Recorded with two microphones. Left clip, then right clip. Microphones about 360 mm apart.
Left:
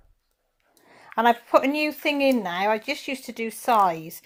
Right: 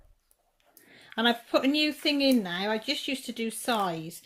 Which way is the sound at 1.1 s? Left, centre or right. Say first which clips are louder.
Left 7 dB; centre.